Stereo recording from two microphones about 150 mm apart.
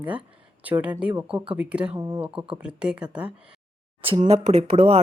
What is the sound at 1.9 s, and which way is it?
Speech, 20° right (ahead or behind).